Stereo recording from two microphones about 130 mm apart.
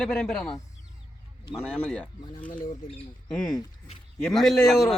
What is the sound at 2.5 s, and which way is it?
Speech, 85° left.